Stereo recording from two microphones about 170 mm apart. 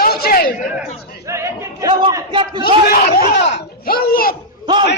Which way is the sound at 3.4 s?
70° left (ahead or behind).